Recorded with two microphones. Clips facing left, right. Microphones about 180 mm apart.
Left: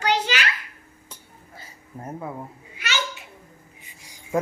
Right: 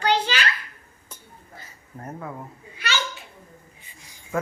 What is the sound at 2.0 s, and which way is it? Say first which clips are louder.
Speech: left 1 dB; 10° left (ahead or behind).